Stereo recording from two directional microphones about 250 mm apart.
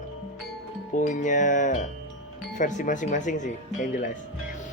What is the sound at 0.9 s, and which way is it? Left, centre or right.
Speech, left.